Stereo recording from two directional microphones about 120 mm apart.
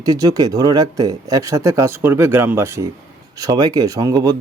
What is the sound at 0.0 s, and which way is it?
Speech, 30° right (ahead or behind).